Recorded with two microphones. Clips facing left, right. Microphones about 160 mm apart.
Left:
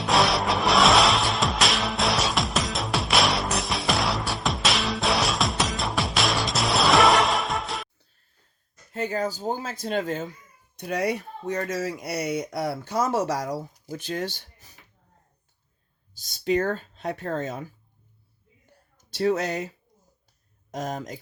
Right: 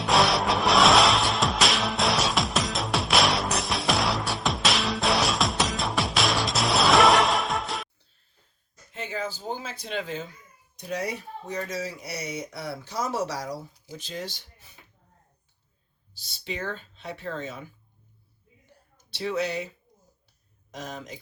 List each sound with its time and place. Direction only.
0.0 s music: centre (ahead or behind)
8.9 s speech: 40° left (ahead or behind)
10.8 s a child's voice: 65° left (ahead or behind)
11.9 s speech: 55° left (ahead or behind)
16.1 s speech: 45° left (ahead or behind)
19.1 s speech: 45° left (ahead or behind)